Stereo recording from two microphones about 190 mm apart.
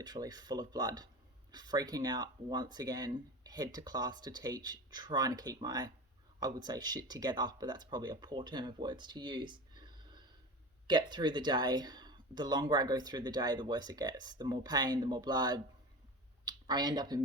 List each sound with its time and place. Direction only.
0.0 s speech: 20° right (ahead or behind)